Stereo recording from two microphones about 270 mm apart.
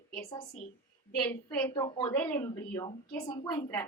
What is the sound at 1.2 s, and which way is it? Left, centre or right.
Speech, centre.